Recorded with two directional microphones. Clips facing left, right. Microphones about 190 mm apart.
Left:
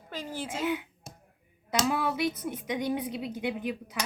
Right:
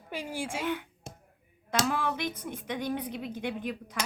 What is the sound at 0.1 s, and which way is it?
Speech, 10° right (ahead or behind).